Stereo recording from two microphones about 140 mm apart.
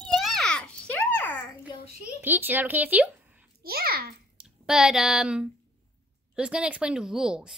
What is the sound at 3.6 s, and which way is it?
Speech, 90° right.